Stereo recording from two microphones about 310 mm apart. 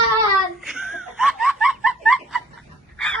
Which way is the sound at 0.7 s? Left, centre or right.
Centre.